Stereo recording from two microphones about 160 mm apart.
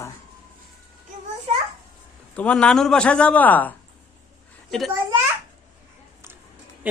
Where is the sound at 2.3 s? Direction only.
5° left (ahead or behind).